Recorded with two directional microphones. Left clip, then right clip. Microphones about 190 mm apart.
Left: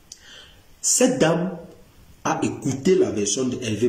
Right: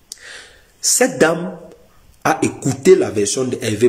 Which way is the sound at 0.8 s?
15° left (ahead or behind).